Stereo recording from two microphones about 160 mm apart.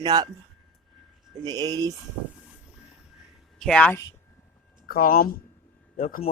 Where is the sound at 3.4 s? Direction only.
Centre (ahead or behind).